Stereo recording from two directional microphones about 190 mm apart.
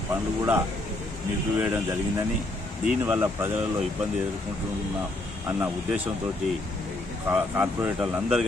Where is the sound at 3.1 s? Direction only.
10° right (ahead or behind).